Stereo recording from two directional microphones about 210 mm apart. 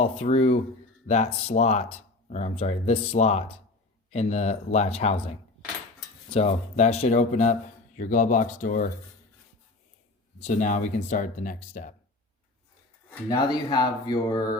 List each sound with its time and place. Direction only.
0.0 s speech: 30° left (ahead or behind)
10.4 s speech: 35° left (ahead or behind)
13.1 s speech: 10° left (ahead or behind)
13.5 s speech: 20° left (ahead or behind)